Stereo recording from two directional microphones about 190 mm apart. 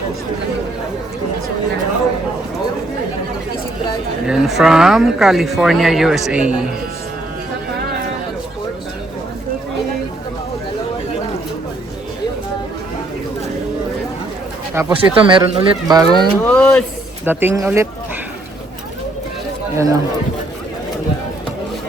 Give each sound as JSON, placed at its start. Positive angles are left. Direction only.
{"t": 4.3, "sound": "speech", "side_deg": 0}
{"t": 14.8, "sound": "speech", "side_deg": -20}
{"t": 16.5, "sound": "speech", "side_deg": 5}
{"t": 17.2, "sound": "speech", "side_deg": -15}
{"t": 19.7, "sound": "speech", "side_deg": -15}